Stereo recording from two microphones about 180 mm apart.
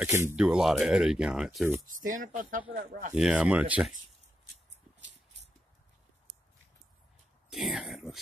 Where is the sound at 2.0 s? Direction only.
45° right (ahead or behind).